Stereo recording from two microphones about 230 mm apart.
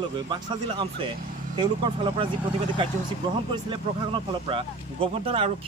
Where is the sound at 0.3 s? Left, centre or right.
Centre.